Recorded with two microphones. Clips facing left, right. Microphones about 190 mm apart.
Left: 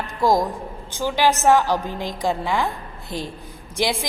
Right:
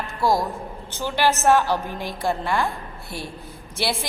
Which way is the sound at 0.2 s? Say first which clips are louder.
Left 3 dB; 15° left (ahead or behind).